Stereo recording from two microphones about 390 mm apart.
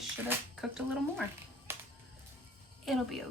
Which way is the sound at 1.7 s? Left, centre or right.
Centre.